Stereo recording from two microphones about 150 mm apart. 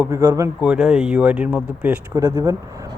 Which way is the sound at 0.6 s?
5° right (ahead or behind).